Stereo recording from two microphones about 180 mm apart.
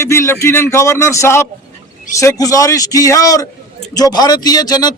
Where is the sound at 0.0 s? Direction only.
15° left (ahead or behind).